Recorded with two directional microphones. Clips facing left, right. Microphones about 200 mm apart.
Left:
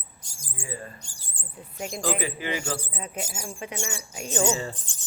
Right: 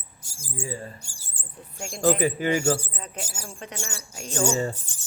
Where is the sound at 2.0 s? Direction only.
45° right (ahead or behind).